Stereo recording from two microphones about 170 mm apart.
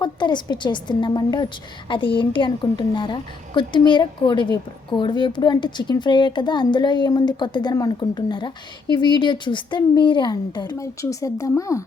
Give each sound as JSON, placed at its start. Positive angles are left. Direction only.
{"t": 0.0, "sound": "a woman's voice", "side_deg": 25}